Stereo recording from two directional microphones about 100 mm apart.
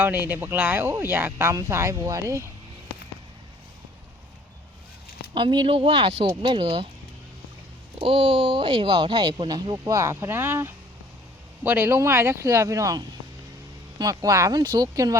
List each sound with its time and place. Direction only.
0.0 s speech: 20° right (ahead or behind)
5.3 s speech: 50° right (ahead or behind); by 6.2 s 70° right (ahead or behind)
6.2 s speech: 55° right (ahead or behind)
7.9 s speech: 65° right (ahead or behind); by 9.7 s 50° right (ahead or behind)
9.7 s speech: 30° right (ahead or behind)
14.0 s speech: 35° right (ahead or behind)